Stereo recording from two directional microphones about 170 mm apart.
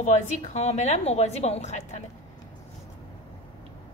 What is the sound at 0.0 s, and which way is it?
A woman's voice, 45° left (ahead or behind).